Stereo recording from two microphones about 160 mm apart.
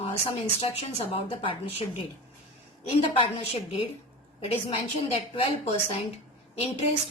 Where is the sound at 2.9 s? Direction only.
35° left (ahead or behind).